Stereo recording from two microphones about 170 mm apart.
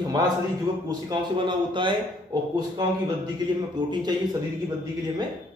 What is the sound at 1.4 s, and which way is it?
Speech, 30° right (ahead or behind).